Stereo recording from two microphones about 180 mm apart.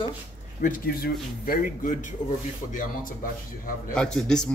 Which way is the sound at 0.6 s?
50° left (ahead or behind).